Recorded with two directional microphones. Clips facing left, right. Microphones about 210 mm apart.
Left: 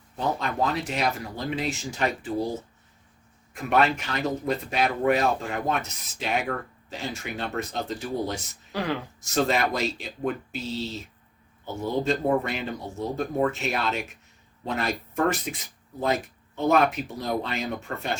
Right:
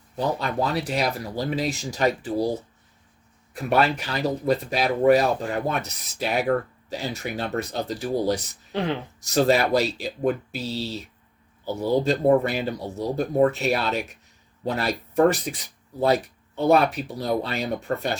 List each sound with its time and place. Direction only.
0.2 s speech: 35° right (ahead or behind)
3.5 s speech: 35° right (ahead or behind)
8.7 s speech: 25° right (ahead or behind)
9.2 s speech: 35° right (ahead or behind)
16.6 s speech: 35° right (ahead or behind)